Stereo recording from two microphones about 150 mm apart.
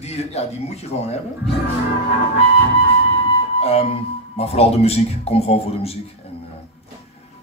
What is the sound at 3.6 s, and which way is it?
Speech, 40° left (ahead or behind).